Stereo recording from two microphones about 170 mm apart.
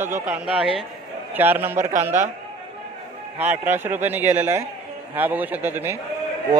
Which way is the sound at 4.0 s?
10° right (ahead or behind).